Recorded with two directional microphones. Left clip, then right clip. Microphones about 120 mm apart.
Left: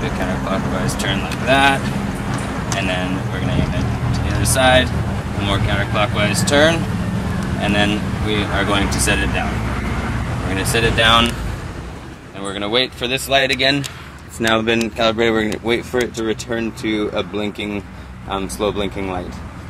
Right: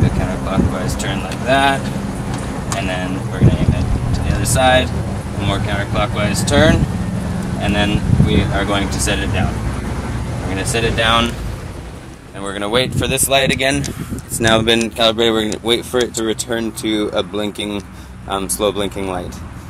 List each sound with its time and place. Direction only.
0.5 s speech: centre (ahead or behind)
4.4 s speech: centre (ahead or behind)
10.5 s speech: centre (ahead or behind)
12.4 s speech: 25° right (ahead or behind)
13.4 s speech: 10° right (ahead or behind)
14.5 s speech: 25° right (ahead or behind)
15.0 s speech: 10° right (ahead or behind)